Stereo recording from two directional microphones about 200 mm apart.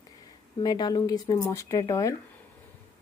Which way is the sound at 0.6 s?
20° left (ahead or behind).